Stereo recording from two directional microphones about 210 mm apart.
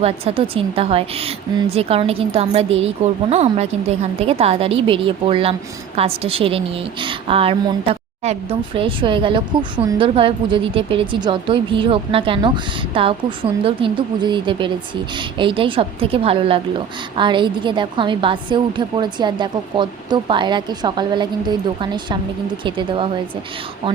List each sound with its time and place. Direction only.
0.0 s a woman's voice: 30° right (ahead or behind)